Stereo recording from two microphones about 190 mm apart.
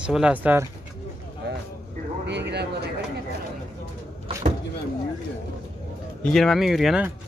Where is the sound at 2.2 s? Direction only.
65° right (ahead or behind).